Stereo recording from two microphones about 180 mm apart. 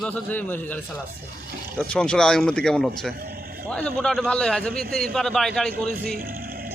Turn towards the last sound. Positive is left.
turn(degrees=-55)  # may be behind; listen again after turning